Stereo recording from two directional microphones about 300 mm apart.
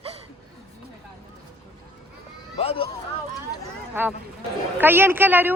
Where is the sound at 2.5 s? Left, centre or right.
Centre.